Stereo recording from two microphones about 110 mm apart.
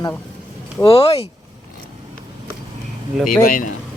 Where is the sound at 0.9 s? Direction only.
60° left (ahead or behind).